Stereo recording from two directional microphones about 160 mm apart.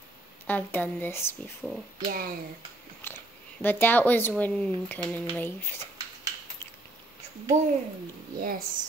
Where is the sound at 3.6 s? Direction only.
10° left (ahead or behind).